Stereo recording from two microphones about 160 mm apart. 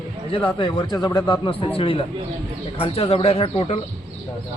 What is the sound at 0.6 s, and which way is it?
A man's voice, 30° left (ahead or behind).